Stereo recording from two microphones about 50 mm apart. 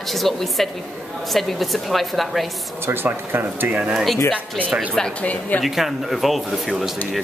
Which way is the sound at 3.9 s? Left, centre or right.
Centre.